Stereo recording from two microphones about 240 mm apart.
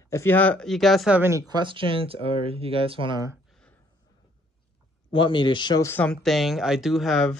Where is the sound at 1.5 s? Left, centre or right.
Centre.